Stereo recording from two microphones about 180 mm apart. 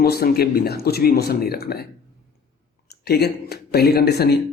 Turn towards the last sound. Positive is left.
turn(degrees=65)  # may be behind; listen again after turning